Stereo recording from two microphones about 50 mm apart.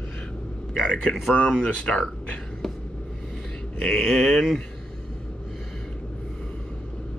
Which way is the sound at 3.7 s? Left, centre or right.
Centre.